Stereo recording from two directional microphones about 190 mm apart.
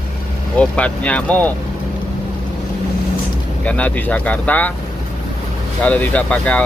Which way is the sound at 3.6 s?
5° left (ahead or behind).